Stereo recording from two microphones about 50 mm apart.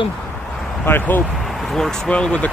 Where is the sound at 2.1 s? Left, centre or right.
Left.